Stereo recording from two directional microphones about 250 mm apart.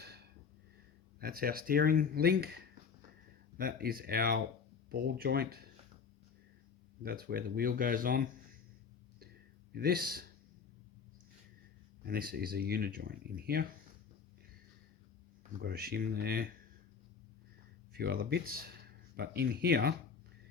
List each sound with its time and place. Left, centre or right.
1.2 s speech: right
7.0 s speech: right
9.7 s speech: right
12.0 s speech: right
15.6 s speech: right
17.9 s speech: right